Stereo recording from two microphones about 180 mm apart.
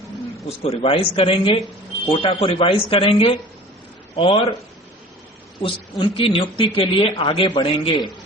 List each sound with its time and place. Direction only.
0.4 s speech: 35° left (ahead or behind)
5.6 s a man's voice: 30° left (ahead or behind)